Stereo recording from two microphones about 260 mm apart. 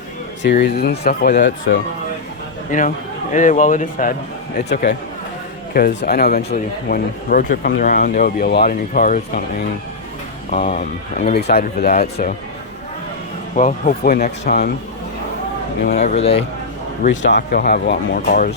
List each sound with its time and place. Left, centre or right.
0.4 s speech: left
2.7 s speech: left
13.6 s speech: left
15.8 s speech: left
17.2 s speech: left